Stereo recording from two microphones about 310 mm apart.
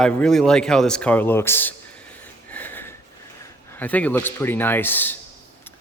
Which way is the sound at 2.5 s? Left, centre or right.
Centre.